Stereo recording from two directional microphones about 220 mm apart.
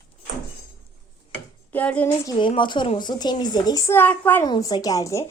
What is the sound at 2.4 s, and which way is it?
A woman's voice, 20° left (ahead or behind).